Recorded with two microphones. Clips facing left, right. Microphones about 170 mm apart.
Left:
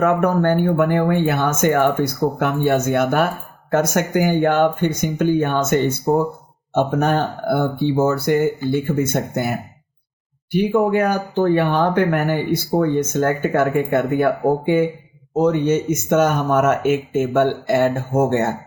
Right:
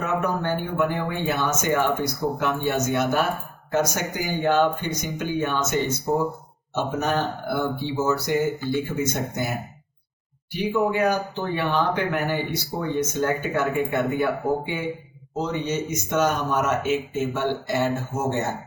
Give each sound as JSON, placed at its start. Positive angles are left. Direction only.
{"t": 0.0, "sound": "speech", "side_deg": 55}
{"t": 10.5, "sound": "speech", "side_deg": 50}